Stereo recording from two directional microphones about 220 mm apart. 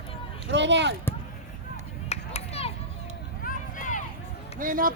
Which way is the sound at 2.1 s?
30° left (ahead or behind).